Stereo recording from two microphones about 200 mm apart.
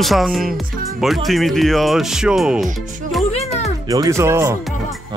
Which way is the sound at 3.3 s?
35° left (ahead or behind).